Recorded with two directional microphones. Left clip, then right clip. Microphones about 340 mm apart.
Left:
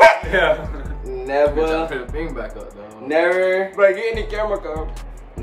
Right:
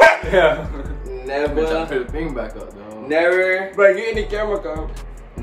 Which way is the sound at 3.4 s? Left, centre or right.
Centre.